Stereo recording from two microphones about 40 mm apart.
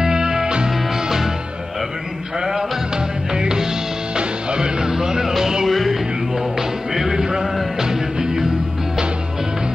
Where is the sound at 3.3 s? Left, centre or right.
Centre.